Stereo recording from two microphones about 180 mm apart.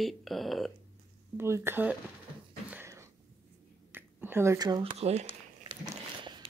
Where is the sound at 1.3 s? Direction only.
15° right (ahead or behind).